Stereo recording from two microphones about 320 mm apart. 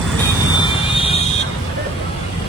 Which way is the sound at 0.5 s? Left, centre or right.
Centre.